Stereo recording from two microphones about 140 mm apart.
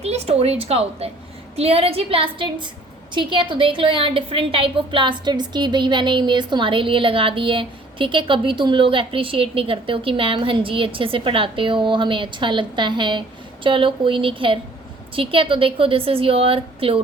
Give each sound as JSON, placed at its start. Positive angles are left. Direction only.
{"t": 0.0, "sound": "a woman's voice", "side_deg": -50}